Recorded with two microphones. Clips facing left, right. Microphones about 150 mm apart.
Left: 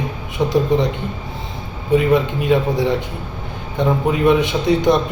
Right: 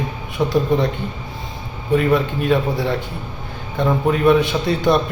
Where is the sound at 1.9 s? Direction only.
20° left (ahead or behind).